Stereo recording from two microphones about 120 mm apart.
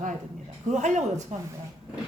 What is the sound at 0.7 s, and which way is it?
Speech, 80° right.